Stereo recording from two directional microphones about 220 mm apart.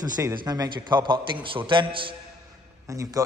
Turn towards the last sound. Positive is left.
turn(degrees=-15)  # may be behind; listen again after turning